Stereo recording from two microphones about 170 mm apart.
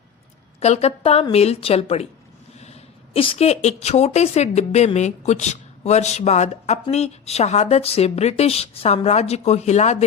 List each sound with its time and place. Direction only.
0.6 s a woman's voice: 40° left (ahead or behind)